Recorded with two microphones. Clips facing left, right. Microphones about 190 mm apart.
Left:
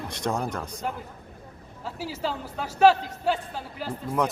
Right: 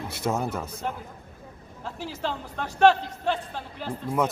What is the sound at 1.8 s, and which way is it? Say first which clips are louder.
A man's voice: left 1 dB; 5° left (ahead or behind).